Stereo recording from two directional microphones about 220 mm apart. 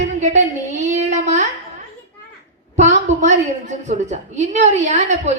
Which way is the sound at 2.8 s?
30° right (ahead or behind).